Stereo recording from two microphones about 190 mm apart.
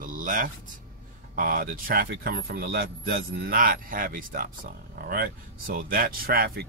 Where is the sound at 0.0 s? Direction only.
45° right (ahead or behind).